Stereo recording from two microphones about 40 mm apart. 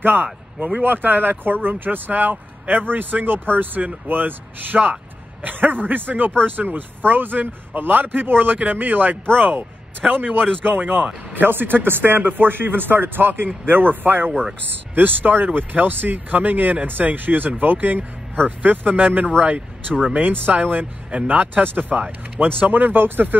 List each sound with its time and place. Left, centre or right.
0.0 s speech: right
10.0 s a man's voice: right
10.7 s speech: right
11.3 s a man's voice: right
12.2 s a man's voice: right